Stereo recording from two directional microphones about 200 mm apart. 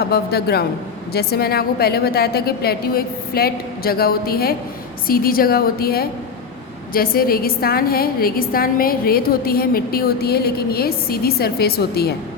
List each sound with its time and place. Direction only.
0.0 s a woman's voice: 50° left (ahead or behind)